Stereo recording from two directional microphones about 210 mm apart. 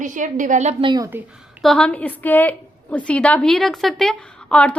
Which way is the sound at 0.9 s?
15° right (ahead or behind).